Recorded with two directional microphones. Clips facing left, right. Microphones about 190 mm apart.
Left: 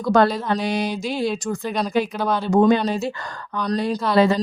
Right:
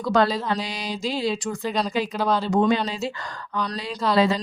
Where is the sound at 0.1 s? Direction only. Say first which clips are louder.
Left 4 dB; 55° left (ahead or behind).